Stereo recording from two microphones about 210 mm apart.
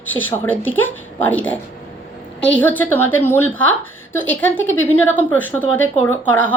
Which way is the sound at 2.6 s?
10° left (ahead or behind).